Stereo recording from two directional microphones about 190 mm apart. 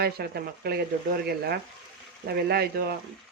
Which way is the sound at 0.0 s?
55° right (ahead or behind).